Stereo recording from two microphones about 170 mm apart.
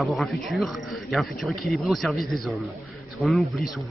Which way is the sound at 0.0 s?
Centre (ahead or behind).